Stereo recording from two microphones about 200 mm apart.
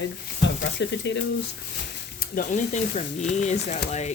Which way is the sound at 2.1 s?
40° left (ahead or behind).